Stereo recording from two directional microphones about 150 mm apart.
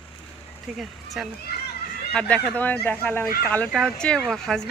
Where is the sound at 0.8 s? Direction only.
Centre (ahead or behind).